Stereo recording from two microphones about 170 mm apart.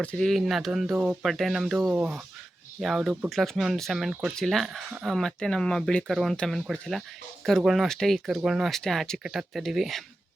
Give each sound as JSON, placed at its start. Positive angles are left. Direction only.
{"t": 0.0, "sound": "speech", "side_deg": 5}